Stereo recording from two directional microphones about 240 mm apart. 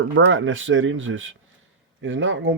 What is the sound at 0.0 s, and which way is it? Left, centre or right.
Speech, right.